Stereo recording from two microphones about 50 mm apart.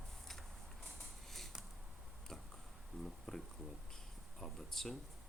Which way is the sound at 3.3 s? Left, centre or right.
Centre.